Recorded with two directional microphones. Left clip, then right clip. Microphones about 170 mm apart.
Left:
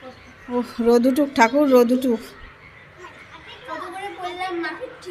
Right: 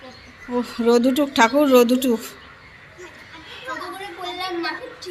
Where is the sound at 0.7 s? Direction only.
20° left (ahead or behind).